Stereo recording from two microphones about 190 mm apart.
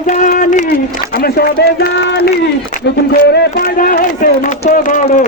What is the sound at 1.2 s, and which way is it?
Speech, 55° left (ahead or behind).